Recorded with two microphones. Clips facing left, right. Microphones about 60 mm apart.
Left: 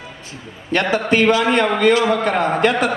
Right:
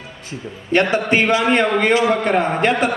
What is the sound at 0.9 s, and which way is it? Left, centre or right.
A man's voice, right.